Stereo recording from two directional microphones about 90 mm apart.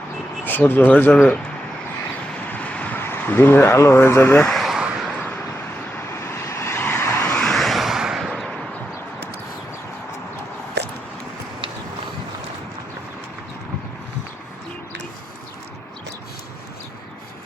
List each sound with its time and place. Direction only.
0.4 s speech: 20° left (ahead or behind)
2.5 s vehicle: 15° left (ahead or behind)
4.4 s vehicle: centre (ahead or behind)
6.1 s vehicle: 30° left (ahead or behind)
7.3 s vehicle: 5° left (ahead or behind)